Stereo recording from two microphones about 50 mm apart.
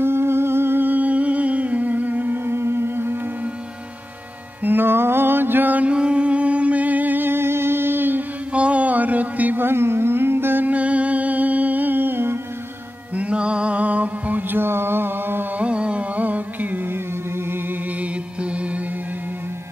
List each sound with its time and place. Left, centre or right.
0.0 s music: right
4.6 s mantra: right
8.5 s a sound: right
9.6 s carnatic music: right
10.7 s music: right
13.1 s music: right
14.6 s mantra: right
15.5 s carnatic music: right
18.0 s music: right